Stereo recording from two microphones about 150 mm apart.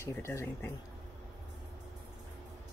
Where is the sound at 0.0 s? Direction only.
20° left (ahead or behind).